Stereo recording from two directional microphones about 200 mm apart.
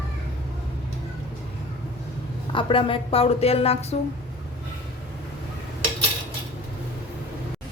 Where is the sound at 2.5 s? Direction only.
25° left (ahead or behind).